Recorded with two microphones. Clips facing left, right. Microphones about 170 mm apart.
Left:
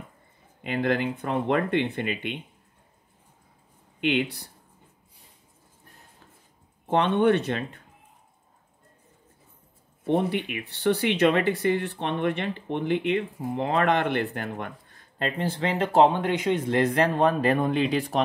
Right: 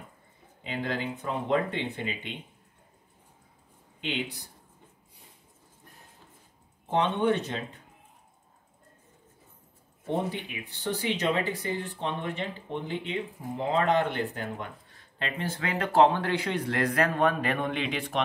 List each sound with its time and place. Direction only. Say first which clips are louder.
0.7 s speech: left 7 dB; 60° left (ahead or behind)
4.0 s speech: left 8 dB; 65° left (ahead or behind)
6.9 s speech: left 4 dB; 65° left (ahead or behind)
10.0 s speech: left 6 dB; 70° left (ahead or behind)
15.1 s speech: left 5 dB; 35° left (ahead or behind)